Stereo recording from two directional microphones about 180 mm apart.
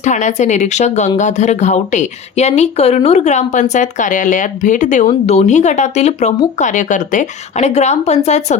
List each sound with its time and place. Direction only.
0.0 s speech: 40° left (ahead or behind)